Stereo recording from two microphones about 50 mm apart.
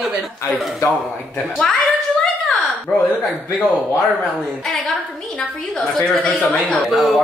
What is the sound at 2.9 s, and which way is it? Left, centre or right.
Speech, centre.